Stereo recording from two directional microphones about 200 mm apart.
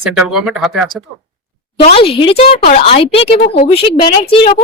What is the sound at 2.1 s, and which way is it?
A woman's voice, 30° left (ahead or behind).